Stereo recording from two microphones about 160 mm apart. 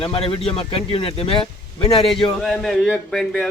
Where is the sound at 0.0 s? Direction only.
30° left (ahead or behind).